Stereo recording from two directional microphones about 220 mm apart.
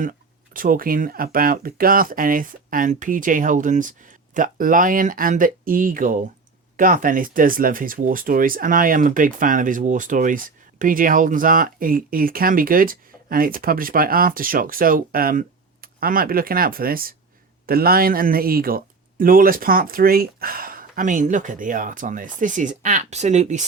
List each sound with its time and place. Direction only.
0.0 s speech: 40° right (ahead or behind)